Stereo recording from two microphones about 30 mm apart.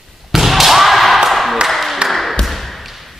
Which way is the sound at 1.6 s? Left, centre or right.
Centre.